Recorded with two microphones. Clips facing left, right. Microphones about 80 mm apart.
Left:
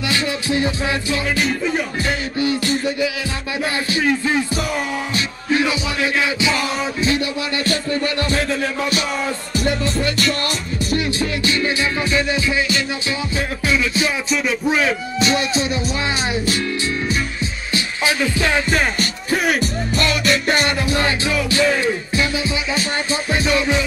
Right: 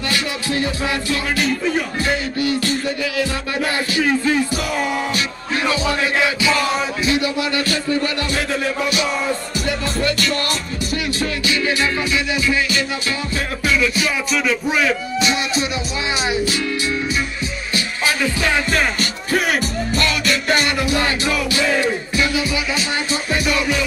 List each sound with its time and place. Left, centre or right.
0.1 s music: left
7.1 s speech: left
13.7 s music: left
14.7 s speech: left
17.7 s music: left
19.4 s music: right
20.2 s music: left